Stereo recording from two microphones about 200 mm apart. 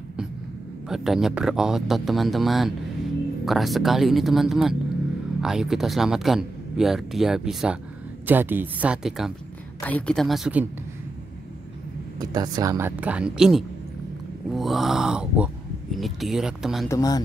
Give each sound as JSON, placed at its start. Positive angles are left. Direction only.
{"t": 0.8, "sound": "speech", "side_deg": 0}
{"t": 12.2, "sound": "speech", "side_deg": -20}
{"t": 16.9, "sound": "speech", "side_deg": 20}